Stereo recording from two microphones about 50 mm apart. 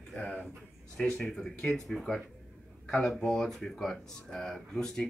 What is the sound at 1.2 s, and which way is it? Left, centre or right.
Speech, centre.